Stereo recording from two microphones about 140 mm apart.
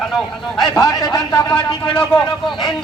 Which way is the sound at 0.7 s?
25° left (ahead or behind).